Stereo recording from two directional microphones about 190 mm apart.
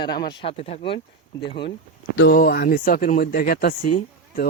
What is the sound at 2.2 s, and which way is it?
Speech, 55° left (ahead or behind).